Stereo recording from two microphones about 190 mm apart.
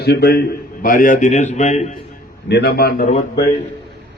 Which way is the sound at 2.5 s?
55° left (ahead or behind).